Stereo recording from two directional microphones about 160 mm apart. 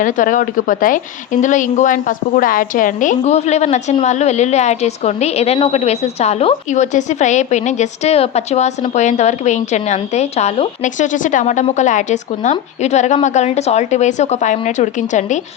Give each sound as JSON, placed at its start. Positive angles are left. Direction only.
{"t": 0.0, "sound": "speech", "side_deg": 55}